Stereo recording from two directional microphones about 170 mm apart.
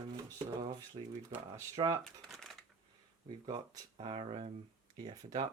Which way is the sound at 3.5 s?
25° right (ahead or behind).